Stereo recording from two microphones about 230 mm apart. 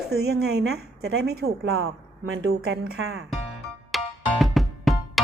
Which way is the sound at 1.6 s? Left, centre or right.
Right.